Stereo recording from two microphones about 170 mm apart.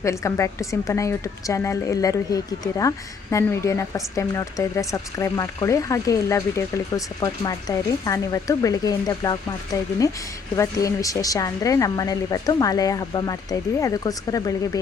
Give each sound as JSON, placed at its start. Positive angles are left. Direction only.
{"t": 0.0, "sound": "a woman's voice", "side_deg": 15}